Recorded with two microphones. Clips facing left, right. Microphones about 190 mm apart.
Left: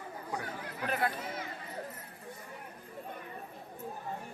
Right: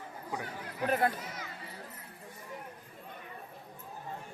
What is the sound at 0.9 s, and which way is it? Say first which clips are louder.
Speech: right 4 dB; 45° right (ahead or behind).